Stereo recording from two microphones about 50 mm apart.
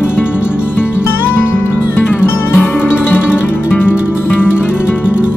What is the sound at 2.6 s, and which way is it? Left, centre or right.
Music, left.